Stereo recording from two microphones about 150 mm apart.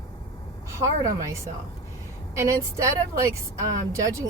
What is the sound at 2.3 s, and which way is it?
Speech, 20° right (ahead or behind).